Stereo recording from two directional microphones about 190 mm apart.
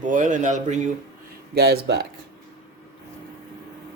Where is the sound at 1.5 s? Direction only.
60° right (ahead or behind).